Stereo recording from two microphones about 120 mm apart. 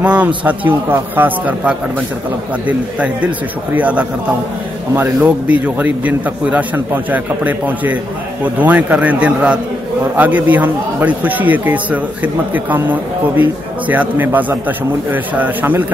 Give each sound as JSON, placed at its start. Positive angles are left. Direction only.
{"t": 0.0, "sound": "a man's voice", "side_deg": -10}